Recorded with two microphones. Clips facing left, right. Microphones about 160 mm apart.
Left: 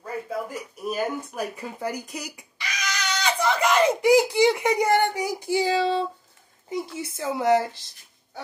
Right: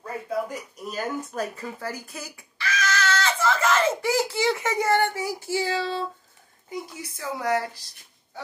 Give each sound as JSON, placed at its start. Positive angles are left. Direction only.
{"t": 0.8, "sound": "a child's voice", "side_deg": 10}